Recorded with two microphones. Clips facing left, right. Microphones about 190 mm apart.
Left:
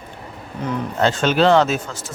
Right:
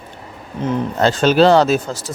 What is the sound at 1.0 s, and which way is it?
Speech, 35° right (ahead or behind).